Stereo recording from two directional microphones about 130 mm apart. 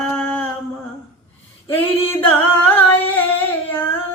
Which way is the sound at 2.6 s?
15° left (ahead or behind).